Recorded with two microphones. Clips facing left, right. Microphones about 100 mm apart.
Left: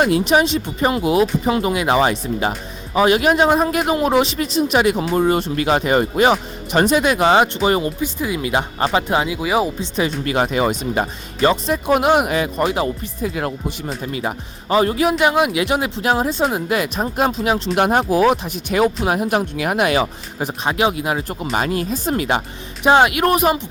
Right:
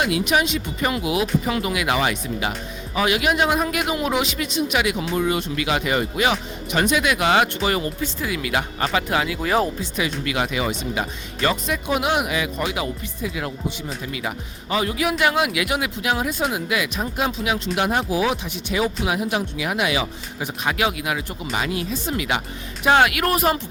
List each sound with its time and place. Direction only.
0.0 s speech: 35° left (ahead or behind)
9.4 s speech: 10° left (ahead or behind)
9.9 s speech: 35° left (ahead or behind)
11.3 s speech: 30° left (ahead or behind)
11.9 s speech: 50° left (ahead or behind)
15.2 s speech: 25° left (ahead or behind)
22.8 s speech: 25° left (ahead or behind)